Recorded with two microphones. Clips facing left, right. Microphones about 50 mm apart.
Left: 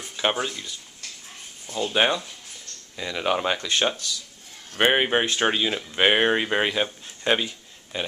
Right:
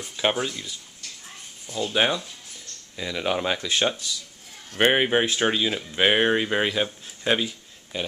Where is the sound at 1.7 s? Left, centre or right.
Centre.